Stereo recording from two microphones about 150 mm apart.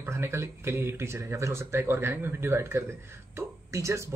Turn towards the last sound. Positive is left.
turn(degrees=-20)  # may be behind; listen again after turning